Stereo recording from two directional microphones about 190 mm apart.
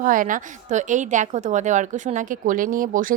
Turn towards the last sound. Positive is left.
turn(degrees=-45)  # may be behind; listen again after turning